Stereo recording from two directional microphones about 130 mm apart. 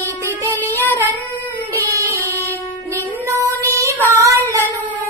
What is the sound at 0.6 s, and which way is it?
Child singing, 15° left (ahead or behind).